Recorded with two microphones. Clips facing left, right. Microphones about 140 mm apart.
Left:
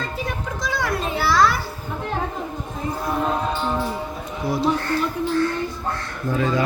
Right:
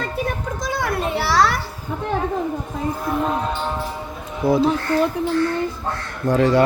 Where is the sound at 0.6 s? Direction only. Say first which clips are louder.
Right 1 dB; 50° right (ahead or behind); by 1.5 s 75° right (ahead or behind).